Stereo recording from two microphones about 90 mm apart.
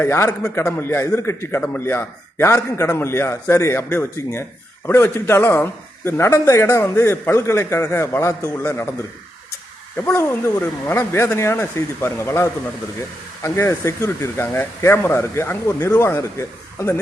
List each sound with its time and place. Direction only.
0.0 s a man's voice: 30° left (ahead or behind)
10.2 s a man's voice: 30° left (ahead or behind)